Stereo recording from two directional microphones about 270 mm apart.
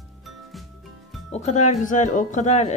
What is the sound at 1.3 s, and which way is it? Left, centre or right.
Speech, left.